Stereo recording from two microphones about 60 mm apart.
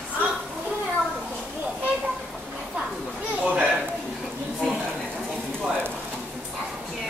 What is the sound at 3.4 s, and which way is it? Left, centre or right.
Children playing, centre.